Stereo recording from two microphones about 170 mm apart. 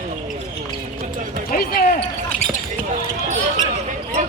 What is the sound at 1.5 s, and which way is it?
Basketball bounce, 65° left (ahead or behind).